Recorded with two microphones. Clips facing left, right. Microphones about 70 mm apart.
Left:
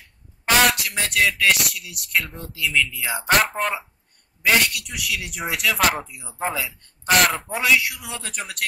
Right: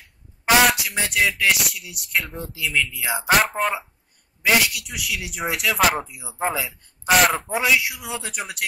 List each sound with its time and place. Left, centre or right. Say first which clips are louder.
0.5 s speech: right 2 dB; centre
6.3 s speech: right 2 dB; centre
6.6 s speech: even; centre